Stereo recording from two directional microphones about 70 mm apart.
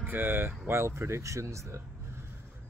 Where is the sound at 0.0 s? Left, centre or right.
Right.